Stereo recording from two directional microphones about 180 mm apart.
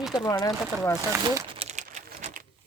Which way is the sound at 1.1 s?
15° right (ahead or behind).